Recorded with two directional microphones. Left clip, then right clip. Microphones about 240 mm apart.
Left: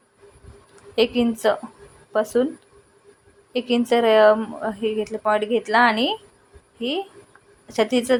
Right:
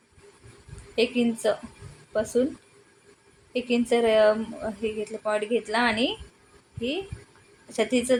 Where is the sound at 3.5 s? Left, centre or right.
Centre.